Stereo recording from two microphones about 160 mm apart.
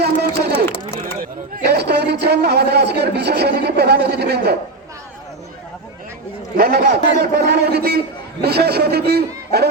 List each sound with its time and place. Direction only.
0.0 s a sound: 90° right
0.9 s speech: 65° right (ahead or behind); by 4.5 s 90° right
6.6 s a man's voice: 85° right